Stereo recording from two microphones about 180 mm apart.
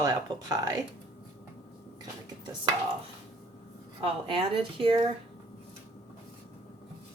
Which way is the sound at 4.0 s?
30° right (ahead or behind).